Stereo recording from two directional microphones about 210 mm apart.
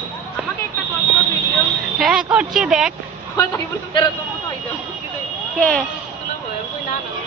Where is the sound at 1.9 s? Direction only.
5° right (ahead or behind).